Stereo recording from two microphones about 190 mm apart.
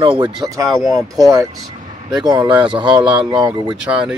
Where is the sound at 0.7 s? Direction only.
Centre (ahead or behind).